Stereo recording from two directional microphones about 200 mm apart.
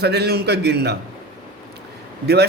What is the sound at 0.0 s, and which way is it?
Speech, 55° right (ahead or behind).